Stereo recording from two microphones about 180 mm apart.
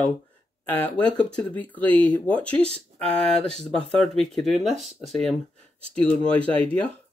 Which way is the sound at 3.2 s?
5° left (ahead or behind).